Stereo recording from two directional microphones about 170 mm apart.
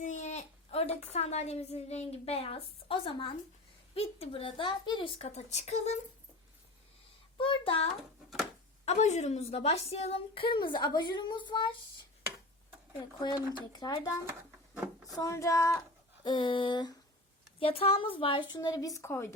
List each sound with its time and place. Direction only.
0.0 s a sound: 45° left (ahead or behind)
1.1 s a woman's voice: 40° left (ahead or behind)
7.3 s a child's voice: 30° left (ahead or behind)
13.2 s a woman's voice: 25° left (ahead or behind)
15.2 s a woman's voice: 20° left (ahead or behind)